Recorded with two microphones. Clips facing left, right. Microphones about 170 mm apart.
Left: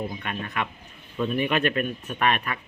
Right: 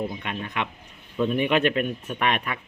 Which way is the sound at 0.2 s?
15° right (ahead or behind).